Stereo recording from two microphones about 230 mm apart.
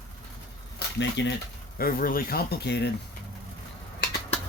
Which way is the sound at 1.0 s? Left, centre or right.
Left.